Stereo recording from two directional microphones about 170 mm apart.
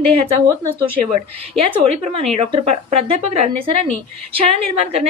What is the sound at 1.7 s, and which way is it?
Speech, 35° right (ahead or behind).